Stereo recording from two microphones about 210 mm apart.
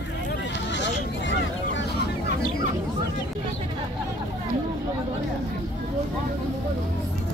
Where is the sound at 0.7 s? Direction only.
60° left (ahead or behind).